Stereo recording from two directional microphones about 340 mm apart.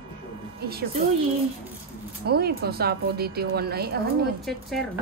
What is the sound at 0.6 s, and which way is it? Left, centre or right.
Speech, right.